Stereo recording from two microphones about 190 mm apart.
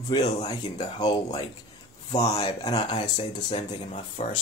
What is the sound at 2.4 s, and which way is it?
Speech, 20° left (ahead or behind).